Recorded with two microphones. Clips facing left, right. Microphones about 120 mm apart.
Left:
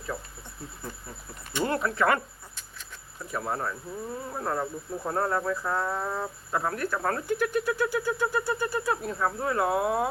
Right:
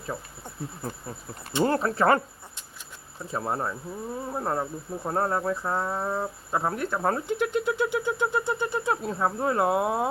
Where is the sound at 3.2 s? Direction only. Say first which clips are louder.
Right 2 dB; 25° right (ahead or behind).